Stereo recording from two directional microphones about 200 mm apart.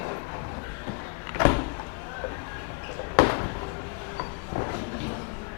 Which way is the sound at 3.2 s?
20° left (ahead or behind).